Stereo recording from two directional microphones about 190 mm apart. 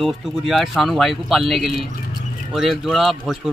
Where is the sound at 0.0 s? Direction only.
Centre (ahead or behind).